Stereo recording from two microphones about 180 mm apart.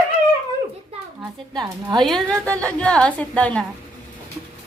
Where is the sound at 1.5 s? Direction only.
25° right (ahead or behind).